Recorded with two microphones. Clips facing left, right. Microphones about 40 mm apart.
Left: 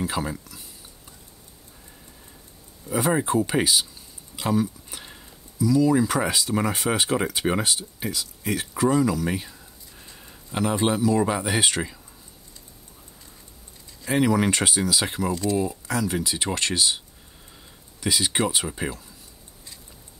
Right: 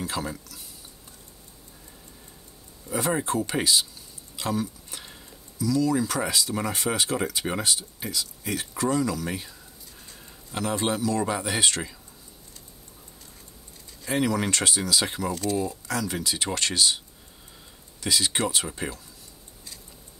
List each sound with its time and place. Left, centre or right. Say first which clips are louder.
0.0 s speech: left 3 dB; centre
2.9 s speech: left 4 dB; centre
14.0 s speech: left 4 dB; centre
15.4 s speech: left 3 dB; centre
18.0 s speech: left 2 dB; centre